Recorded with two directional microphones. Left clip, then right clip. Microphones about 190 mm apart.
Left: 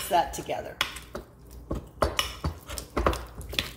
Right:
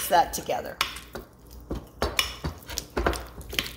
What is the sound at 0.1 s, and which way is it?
Speech, 40° right (ahead or behind).